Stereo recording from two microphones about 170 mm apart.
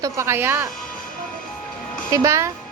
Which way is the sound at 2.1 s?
20° right (ahead or behind).